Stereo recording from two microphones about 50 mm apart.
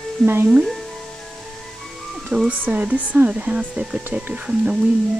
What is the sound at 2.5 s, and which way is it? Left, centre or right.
Speech, right.